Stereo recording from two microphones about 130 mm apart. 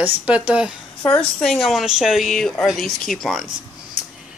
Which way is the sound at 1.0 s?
5° left (ahead or behind).